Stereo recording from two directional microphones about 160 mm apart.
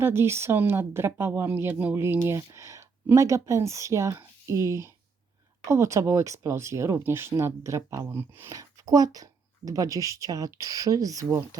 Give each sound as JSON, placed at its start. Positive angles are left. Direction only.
{"t": 0.0, "sound": "speech", "side_deg": -15}